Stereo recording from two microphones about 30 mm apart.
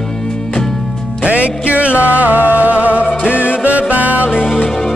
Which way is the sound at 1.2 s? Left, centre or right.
Right.